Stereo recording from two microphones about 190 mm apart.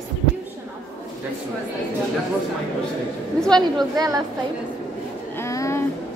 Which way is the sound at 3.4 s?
5° left (ahead or behind).